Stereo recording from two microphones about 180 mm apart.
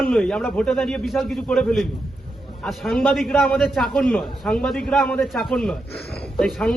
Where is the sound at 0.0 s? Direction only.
5° left (ahead or behind).